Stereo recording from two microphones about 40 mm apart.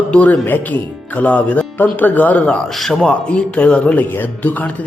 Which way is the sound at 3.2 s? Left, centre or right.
Left.